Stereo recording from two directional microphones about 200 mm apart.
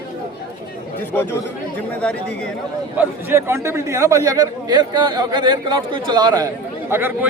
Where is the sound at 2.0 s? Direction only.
5° left (ahead or behind).